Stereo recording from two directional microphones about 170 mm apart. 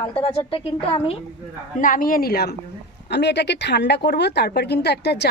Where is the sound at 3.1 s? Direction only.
85° left.